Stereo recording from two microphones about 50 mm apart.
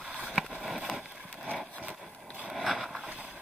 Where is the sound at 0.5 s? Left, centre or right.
Centre.